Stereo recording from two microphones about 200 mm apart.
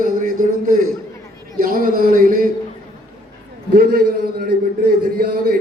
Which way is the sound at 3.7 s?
50° right (ahead or behind).